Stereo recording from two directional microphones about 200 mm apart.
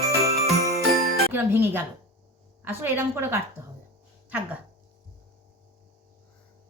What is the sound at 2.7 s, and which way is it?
Speech, 10° right (ahead or behind).